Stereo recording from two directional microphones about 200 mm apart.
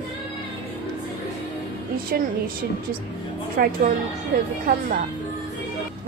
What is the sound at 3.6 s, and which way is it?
Speech, 45° right (ahead or behind).